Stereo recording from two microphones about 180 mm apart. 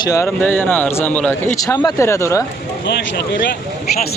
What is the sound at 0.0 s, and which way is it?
Speech, 15° left (ahead or behind).